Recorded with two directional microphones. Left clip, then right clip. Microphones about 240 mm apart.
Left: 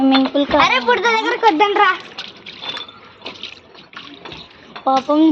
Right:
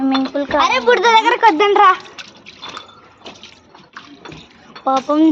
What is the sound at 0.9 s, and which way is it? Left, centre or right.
Speech, right.